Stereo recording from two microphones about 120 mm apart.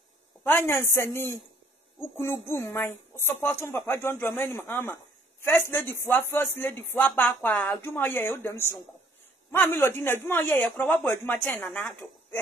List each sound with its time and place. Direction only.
0.4 s a man's voice: 15° left (ahead or behind)
11.8 s a woman's voice: 5° left (ahead or behind)